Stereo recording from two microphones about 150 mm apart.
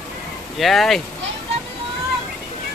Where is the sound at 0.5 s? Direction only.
Centre (ahead or behind).